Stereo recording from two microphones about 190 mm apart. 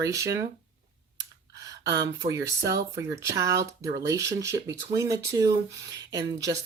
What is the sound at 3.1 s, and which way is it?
Speech, 15° right (ahead or behind).